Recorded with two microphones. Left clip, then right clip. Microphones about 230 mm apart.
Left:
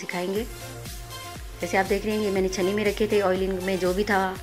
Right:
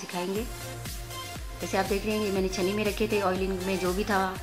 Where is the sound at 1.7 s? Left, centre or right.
Centre.